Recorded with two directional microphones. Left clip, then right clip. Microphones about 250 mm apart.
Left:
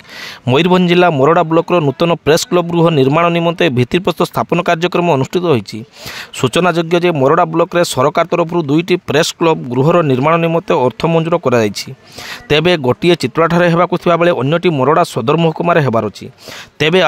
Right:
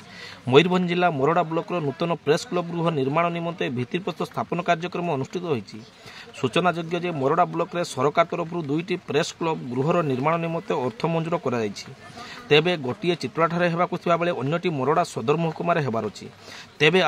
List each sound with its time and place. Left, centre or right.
0.5 s speech: left